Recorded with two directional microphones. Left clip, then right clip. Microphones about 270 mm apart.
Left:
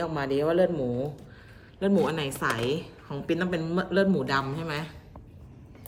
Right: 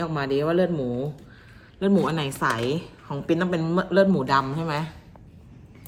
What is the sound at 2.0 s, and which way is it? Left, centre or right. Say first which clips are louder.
A woman's voice: right 3 dB; centre.